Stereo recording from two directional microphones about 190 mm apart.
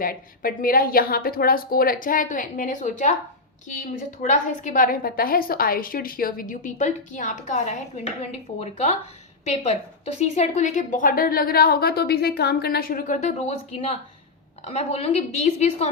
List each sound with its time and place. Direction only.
0.0 s a woman's voice: 50° left (ahead or behind)
4.2 s a woman's voice: 40° left (ahead or behind)